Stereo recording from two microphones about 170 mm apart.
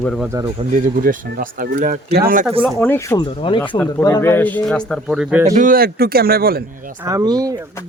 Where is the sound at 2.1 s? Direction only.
60° right (ahead or behind).